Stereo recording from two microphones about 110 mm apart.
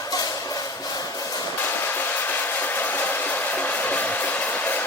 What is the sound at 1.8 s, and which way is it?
Hair dryer, 20° left (ahead or behind).